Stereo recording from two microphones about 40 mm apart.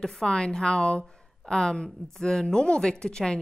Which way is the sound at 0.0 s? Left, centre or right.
Centre.